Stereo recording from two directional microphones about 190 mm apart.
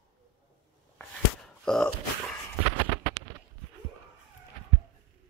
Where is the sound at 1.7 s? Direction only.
5° left (ahead or behind).